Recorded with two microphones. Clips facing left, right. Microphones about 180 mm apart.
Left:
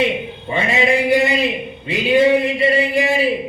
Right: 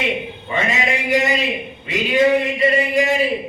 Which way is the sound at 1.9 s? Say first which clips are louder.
Left 2 dB; 30° left (ahead or behind).